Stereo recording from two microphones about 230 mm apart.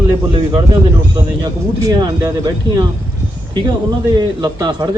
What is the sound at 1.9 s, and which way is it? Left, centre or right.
A man's voice, centre.